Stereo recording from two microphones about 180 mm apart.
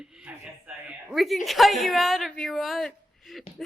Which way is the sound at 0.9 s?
Centre (ahead or behind).